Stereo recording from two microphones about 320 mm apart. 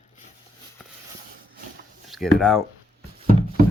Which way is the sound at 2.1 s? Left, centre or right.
Centre.